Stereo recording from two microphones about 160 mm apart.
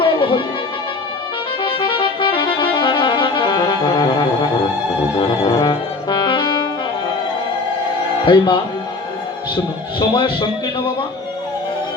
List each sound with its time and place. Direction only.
0.0 s music: 30° left (ahead or behind)
1.6 s music: 30° left (ahead or behind)
5.1 s brass instrument: 30° left (ahead or behind)
8.2 s a man's voice: 30° left (ahead or behind)
10.0 s a man's voice: 30° left (ahead or behind)